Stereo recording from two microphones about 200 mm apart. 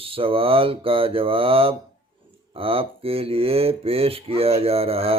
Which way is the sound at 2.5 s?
30° right (ahead or behind).